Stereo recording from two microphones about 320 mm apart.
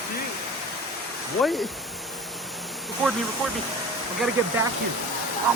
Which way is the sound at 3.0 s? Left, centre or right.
Centre.